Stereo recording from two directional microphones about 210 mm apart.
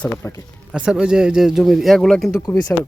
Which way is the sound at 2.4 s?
15° left (ahead or behind).